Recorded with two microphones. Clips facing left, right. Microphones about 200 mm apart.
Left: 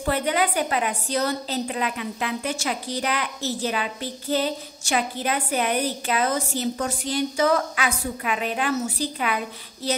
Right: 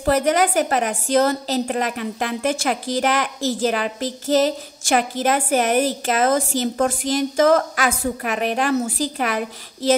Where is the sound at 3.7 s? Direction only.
50° right (ahead or behind).